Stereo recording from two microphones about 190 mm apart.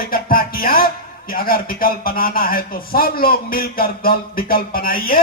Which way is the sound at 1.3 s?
50° left (ahead or behind).